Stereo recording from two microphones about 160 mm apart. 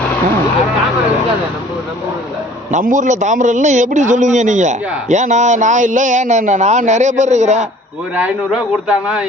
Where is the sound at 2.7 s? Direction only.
50° right (ahead or behind).